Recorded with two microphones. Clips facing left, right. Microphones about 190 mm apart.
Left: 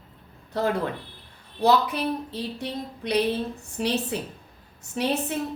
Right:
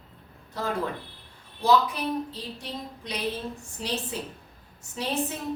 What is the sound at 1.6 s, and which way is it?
Speech, 65° left (ahead or behind).